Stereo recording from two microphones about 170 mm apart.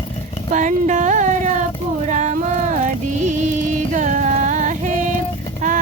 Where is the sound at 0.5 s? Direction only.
45° right (ahead or behind).